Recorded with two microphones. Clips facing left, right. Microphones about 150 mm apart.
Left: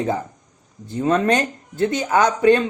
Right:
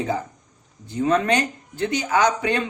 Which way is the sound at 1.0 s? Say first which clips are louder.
Left 2 dB; 35° left (ahead or behind).